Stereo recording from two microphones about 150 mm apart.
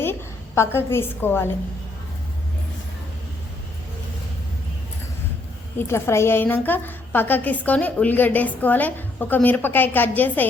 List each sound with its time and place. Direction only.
0.0 s a woman's voice: 15° left (ahead or behind)
5.9 s a woman's voice: 15° left (ahead or behind)